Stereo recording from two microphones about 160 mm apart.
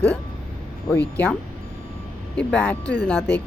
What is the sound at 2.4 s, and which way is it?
Speech, 10° left (ahead or behind).